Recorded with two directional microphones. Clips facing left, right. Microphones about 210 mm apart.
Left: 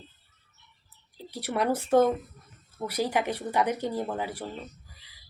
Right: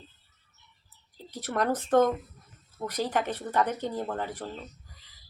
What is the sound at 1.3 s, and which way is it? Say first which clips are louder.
Speech: left 1 dB; 10° left (ahead or behind).